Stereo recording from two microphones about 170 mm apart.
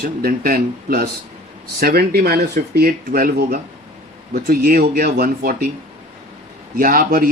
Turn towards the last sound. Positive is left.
turn(degrees=-55)  # may be behind; listen again after turning